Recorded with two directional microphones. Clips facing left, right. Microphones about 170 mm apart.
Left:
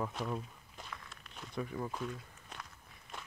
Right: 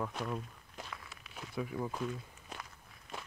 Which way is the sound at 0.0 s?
Centre (ahead or behind).